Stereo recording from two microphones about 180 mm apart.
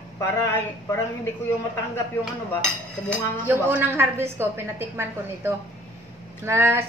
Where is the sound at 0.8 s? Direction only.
15° left (ahead or behind).